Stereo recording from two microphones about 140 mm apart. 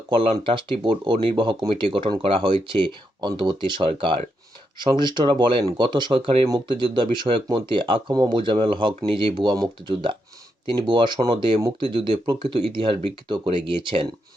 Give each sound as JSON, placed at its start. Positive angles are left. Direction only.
{"t": 0.1, "sound": "speech", "side_deg": -40}